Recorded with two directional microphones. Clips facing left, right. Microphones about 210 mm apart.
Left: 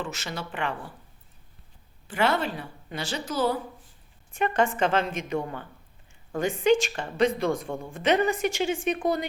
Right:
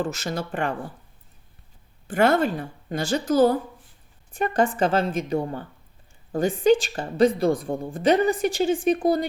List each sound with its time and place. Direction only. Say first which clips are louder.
0.0 s a woman's voice: right 7 dB; 40° right (ahead or behind)
2.0 s a woman's voice: right 6 dB; 50° right (ahead or behind)
4.3 s a woman's voice: right 2 dB; 35° right (ahead or behind)